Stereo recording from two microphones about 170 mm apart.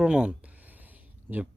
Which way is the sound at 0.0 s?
5° right (ahead or behind).